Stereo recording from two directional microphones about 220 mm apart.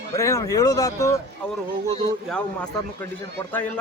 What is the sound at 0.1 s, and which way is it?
A man's voice, 15° left (ahead or behind).